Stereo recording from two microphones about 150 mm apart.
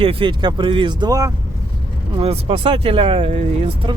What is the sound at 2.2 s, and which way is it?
Speech, 40° right (ahead or behind).